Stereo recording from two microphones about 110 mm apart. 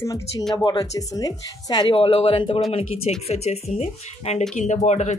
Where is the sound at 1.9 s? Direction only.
60° left (ahead or behind).